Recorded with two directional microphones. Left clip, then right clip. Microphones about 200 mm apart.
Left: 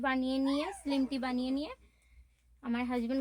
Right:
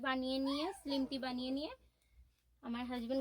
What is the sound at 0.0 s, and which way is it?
Speech, 20° left (ahead or behind).